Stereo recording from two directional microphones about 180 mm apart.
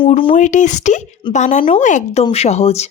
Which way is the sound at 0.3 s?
45° left (ahead or behind).